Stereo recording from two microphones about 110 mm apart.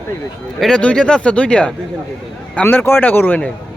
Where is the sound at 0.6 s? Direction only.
10° left (ahead or behind).